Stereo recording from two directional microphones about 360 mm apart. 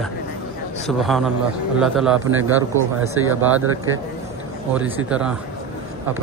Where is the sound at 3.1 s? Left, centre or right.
Right.